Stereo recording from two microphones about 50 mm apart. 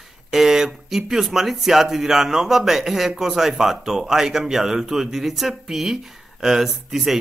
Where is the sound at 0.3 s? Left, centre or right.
Centre.